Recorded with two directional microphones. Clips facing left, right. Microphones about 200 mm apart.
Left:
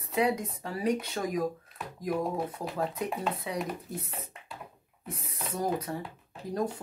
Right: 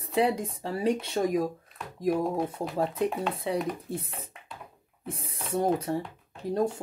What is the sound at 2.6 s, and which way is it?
Speech, 25° right (ahead or behind).